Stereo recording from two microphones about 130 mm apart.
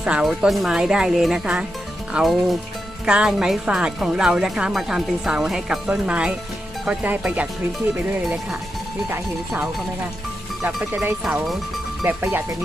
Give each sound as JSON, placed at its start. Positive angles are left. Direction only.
{"t": 0.0, "sound": "speech", "side_deg": -5}
{"t": 10.6, "sound": "speech", "side_deg": -5}
{"t": 12.0, "sound": "speech", "side_deg": -15}